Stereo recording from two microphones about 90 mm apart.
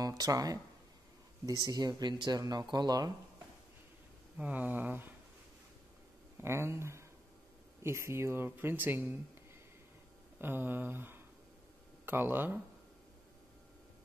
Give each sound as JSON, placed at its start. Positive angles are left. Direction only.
{"t": 0.0, "sound": "speech", "side_deg": -40}
{"t": 4.4, "sound": "speech", "side_deg": -20}
{"t": 6.4, "sound": "speech", "side_deg": -30}
{"t": 10.4, "sound": "speech", "side_deg": -25}